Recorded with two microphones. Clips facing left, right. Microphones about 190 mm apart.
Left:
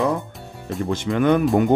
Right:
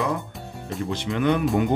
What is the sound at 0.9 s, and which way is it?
Speech, 45° left (ahead or behind).